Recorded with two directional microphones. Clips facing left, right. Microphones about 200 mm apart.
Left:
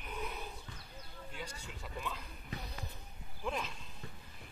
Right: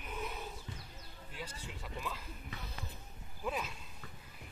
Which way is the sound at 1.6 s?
Centre (ahead or behind).